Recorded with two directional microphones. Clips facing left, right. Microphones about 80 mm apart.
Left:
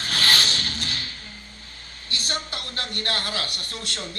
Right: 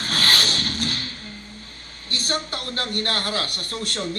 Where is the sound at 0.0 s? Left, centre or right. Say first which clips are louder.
Right 1 dB; right.